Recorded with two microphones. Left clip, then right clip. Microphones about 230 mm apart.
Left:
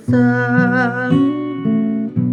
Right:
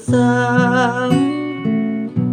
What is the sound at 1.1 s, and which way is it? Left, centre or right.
Music, centre.